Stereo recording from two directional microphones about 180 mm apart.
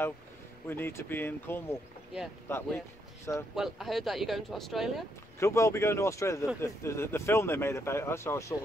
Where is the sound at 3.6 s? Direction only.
Centre (ahead or behind).